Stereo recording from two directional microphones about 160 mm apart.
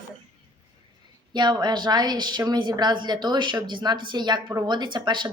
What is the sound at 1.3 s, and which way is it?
A woman's voice, 30° right (ahead or behind).